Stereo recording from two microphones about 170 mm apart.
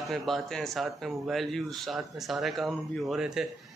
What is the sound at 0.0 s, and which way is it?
A man's voice, centre (ahead or behind).